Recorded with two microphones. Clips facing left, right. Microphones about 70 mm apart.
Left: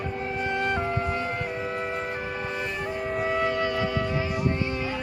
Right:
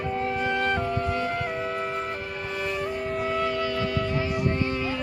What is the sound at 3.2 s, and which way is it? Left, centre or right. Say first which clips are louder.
Music: left 2 dB; left.